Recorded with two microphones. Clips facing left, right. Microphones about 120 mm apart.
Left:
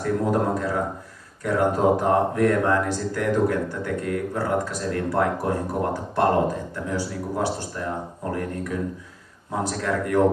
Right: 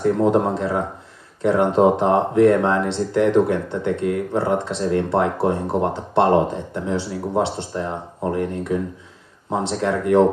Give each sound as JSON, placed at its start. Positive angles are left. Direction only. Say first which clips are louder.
{"t": 0.0, "sound": "speech", "louder": "right 5 dB", "side_deg": -25}